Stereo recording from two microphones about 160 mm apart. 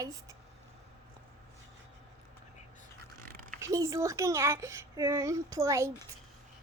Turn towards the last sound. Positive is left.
turn(degrees=-20)  # may be behind; listen again after turning